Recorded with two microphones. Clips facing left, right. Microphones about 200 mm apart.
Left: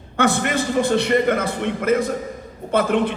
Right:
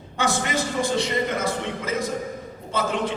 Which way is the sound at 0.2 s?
60° left (ahead or behind).